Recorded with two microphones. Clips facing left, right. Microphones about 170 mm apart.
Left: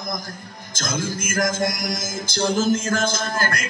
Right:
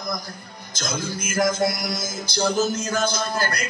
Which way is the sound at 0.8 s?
45° left (ahead or behind).